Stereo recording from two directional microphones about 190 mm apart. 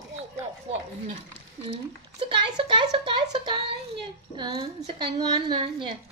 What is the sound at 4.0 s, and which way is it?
A woman's voice, 25° right (ahead or behind).